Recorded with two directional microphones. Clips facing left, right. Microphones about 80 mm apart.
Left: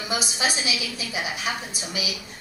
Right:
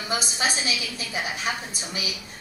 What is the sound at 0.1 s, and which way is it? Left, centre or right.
Speech, right.